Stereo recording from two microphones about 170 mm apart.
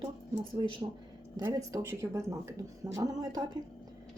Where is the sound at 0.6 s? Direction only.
25° right (ahead or behind).